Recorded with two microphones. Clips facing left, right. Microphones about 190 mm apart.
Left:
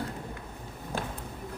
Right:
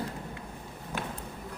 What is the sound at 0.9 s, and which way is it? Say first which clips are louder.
Basketball bounce: left 2 dB; 30° left (ahead or behind).